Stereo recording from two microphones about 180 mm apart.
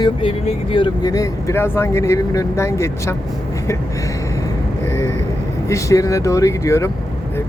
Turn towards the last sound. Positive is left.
turn(degrees=15)  # may be behind; listen again after turning